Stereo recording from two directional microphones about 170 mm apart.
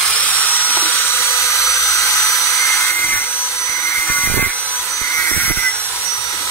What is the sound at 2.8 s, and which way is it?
Vacuum cleaner, 15° left (ahead or behind).